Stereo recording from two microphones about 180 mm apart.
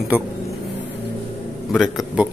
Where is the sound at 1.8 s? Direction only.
5° right (ahead or behind).